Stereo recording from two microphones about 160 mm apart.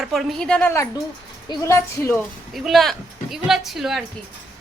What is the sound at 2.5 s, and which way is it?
A woman's voice, centre (ahead or behind).